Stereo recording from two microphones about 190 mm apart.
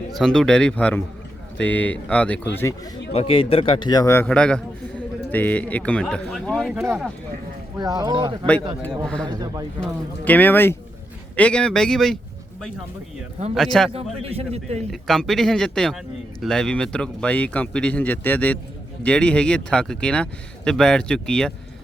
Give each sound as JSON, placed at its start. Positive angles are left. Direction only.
{"t": 0.1, "sound": "a man's voice", "side_deg": 5}
{"t": 3.1, "sound": "a man's voice", "side_deg": 30}
{"t": 6.7, "sound": "speech", "side_deg": -10}
{"t": 9.8, "sound": "a man's voice", "side_deg": 10}
{"t": 13.5, "sound": "speech", "side_deg": 0}
{"t": 13.9, "sound": "a man's voice", "side_deg": -30}
{"t": 14.8, "sound": "a man's voice", "side_deg": 0}